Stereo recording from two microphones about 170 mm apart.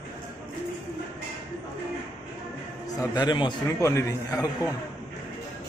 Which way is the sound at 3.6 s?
15° left (ahead or behind).